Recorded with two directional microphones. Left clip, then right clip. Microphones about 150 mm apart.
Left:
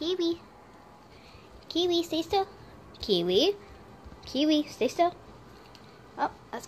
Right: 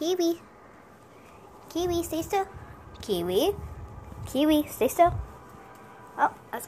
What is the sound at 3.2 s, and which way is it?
Speech, 30° left (ahead or behind).